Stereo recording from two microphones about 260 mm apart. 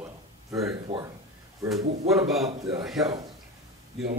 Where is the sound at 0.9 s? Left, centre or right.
Right.